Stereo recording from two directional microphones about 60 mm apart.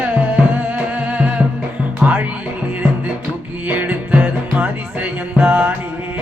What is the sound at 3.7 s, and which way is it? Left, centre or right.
Music, right.